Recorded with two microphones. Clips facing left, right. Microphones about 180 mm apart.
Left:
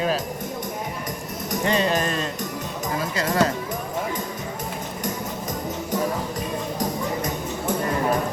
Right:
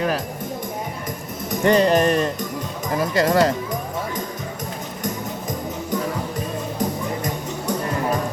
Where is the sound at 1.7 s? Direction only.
55° right (ahead or behind).